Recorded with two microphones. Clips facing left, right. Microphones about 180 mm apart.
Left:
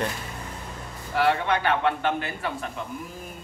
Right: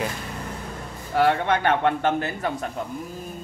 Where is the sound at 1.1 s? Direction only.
45° right (ahead or behind).